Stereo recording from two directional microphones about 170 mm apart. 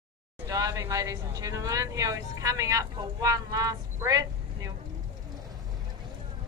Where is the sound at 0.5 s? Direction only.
20° right (ahead or behind).